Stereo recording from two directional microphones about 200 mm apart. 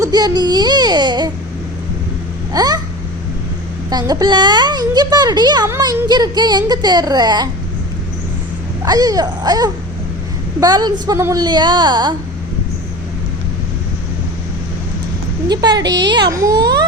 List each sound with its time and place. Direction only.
0.0 s a child's voice: 20° right (ahead or behind)
2.5 s a sound: 20° right (ahead or behind)
3.8 s a child's voice: 20° right (ahead or behind)
8.8 s a child's voice: 20° right (ahead or behind)
15.4 s a child's voice: 20° right (ahead or behind)